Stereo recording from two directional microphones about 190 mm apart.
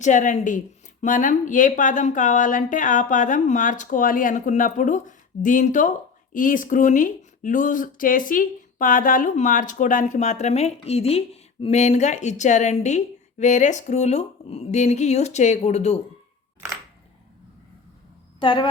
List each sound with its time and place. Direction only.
0.0 s speech: 40° left (ahead or behind)
18.3 s speech: 25° left (ahead or behind)